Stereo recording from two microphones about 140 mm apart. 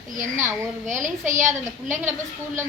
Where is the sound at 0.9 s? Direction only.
60° right (ahead or behind).